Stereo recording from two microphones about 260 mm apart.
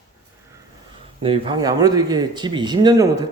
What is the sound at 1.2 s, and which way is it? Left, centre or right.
Speech, centre.